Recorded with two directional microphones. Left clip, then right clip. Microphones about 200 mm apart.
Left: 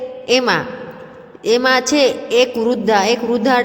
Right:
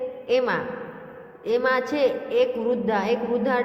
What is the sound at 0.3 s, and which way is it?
A woman's voice, 45° left (ahead or behind).